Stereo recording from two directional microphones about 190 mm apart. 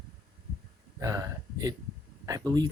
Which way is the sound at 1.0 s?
15° right (ahead or behind).